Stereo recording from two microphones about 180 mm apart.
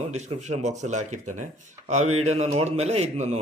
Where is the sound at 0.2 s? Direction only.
40° right (ahead or behind).